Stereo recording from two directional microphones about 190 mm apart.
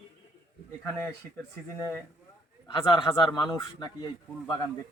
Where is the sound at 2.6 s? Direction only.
25° left (ahead or behind).